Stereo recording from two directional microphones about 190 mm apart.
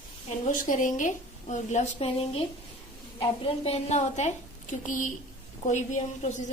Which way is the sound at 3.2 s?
30° left (ahead or behind).